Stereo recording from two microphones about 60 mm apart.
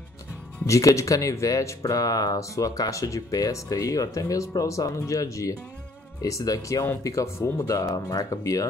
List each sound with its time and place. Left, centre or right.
0.7 s speech: left
7.0 s speech: left